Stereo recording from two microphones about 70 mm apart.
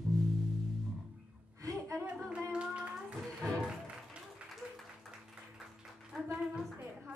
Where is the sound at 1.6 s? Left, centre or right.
Right.